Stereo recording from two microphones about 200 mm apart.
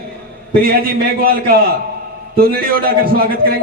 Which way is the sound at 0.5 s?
50° right (ahead or behind).